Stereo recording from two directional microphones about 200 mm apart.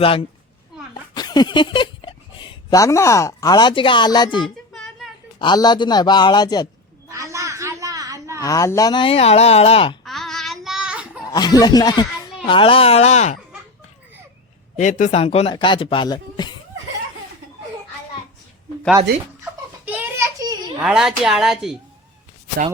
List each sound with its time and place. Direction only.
0.0 s speech: 25° left (ahead or behind)
4.4 s a sound: centre (ahead or behind)
5.4 s speech: 20° left (ahead or behind)
7.1 s a sound: 15° right (ahead or behind)
8.4 s speech: 15° left (ahead or behind)
10.0 s child singing: centre (ahead or behind)
11.2 s speech: 20° left (ahead or behind)
14.8 s speech: 40° left (ahead or behind); by 16.6 s 20° left (ahead or behind)
19.8 s children playing: 10° right (ahead or behind)
20.8 s speech: centre (ahead or behind)